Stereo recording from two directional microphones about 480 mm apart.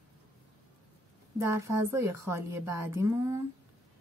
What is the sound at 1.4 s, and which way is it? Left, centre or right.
Speech, centre.